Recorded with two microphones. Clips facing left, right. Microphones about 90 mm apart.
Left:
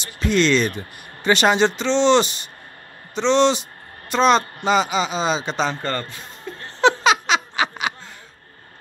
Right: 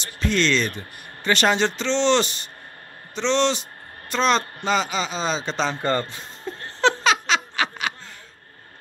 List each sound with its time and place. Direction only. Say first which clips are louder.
0.0 s speech: left 3 dB; 15° left (ahead or behind)
5.8 s speech: right 3 dB; 20° right (ahead or behind)
6.8 s a sound: left 3 dB; 10° left (ahead or behind)